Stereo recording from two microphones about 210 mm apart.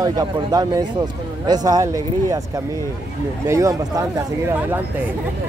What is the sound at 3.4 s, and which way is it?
Speech, 15° right (ahead or behind).